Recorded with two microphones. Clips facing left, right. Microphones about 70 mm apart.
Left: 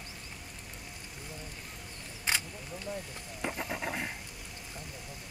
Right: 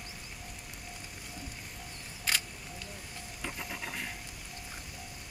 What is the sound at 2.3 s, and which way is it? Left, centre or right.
Single-lens reflex camera, left.